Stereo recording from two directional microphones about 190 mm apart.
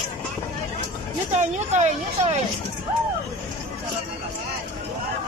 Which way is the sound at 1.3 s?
35° right (ahead or behind).